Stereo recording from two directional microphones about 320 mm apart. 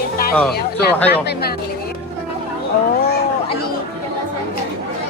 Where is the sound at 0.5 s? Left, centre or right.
Left.